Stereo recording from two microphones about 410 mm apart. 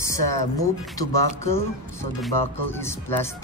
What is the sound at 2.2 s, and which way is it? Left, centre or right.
Speech, centre.